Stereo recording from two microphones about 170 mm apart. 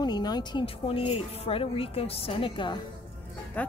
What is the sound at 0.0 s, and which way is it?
Speech, 25° left (ahead or behind).